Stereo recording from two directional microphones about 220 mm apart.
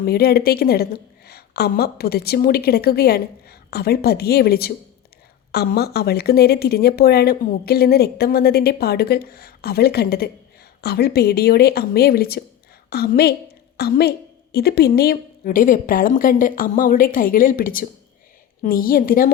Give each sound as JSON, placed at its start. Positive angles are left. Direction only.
{"t": 0.0, "sound": "a woman's voice", "side_deg": 45}